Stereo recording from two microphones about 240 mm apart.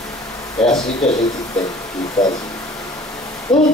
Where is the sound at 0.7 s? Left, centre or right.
Centre.